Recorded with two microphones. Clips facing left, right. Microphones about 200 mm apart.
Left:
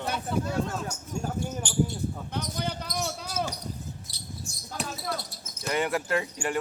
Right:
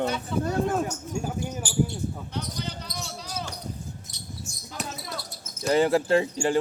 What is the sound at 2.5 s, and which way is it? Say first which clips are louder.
Basketball bounce: left 3 dB; 50° left (ahead or behind).